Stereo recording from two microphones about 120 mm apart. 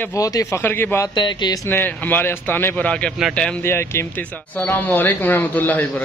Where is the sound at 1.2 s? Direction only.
40° left (ahead or behind).